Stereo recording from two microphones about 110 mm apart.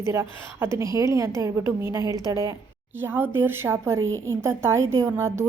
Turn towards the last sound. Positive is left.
turn(degrees=-25)  # may be behind; listen again after turning